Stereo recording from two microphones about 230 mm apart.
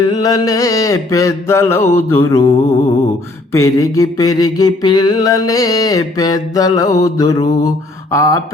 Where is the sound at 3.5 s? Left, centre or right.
Centre.